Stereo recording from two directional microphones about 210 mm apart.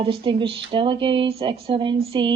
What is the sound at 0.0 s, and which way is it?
Speech, 25° right (ahead or behind).